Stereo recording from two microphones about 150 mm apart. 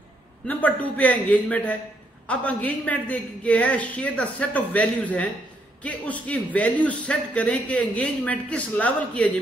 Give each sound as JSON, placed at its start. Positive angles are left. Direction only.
{"t": 0.5, "sound": "a man's voice", "side_deg": 10}